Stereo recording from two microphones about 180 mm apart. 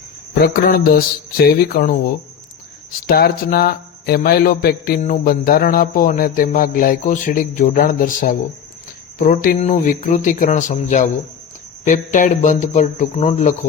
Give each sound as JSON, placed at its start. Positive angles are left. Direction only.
{"t": 0.4, "sound": "a man's voice", "side_deg": 55}